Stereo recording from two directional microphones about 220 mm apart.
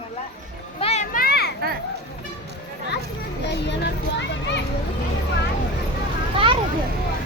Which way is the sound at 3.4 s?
50° left (ahead or behind).